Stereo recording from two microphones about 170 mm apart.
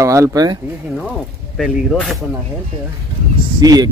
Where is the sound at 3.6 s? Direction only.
20° right (ahead or behind).